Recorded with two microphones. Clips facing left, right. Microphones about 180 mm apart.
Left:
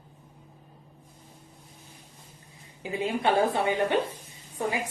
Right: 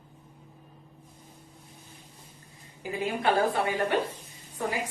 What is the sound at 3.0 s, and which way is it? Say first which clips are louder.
Speech: left 1 dB; 25° left (ahead or behind).